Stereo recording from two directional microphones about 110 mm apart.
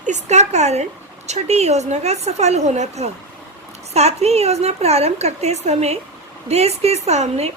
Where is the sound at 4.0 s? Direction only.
75° right (ahead or behind).